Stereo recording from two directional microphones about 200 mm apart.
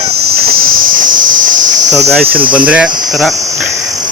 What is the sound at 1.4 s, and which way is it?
Cricket, 40° right (ahead or behind).